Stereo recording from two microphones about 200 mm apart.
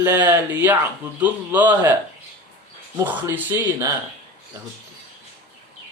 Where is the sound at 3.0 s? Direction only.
10° right (ahead or behind).